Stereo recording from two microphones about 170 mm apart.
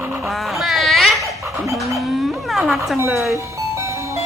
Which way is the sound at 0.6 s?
Centre (ahead or behind).